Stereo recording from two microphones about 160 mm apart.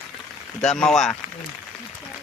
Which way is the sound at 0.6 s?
5° left (ahead or behind).